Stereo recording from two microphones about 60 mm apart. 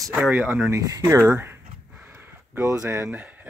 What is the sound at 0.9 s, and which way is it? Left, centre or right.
Speech, right.